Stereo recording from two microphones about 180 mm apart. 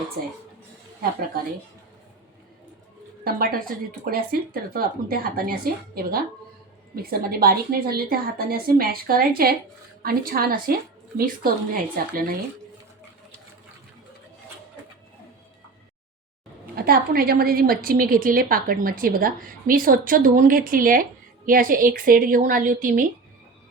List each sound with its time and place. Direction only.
3.2 s a woman's voice: 55° right (ahead or behind)
16.7 s a woman's voice: 55° right (ahead or behind)